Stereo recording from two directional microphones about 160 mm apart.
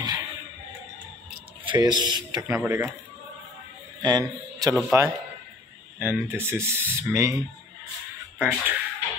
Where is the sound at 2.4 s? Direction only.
15° right (ahead or behind).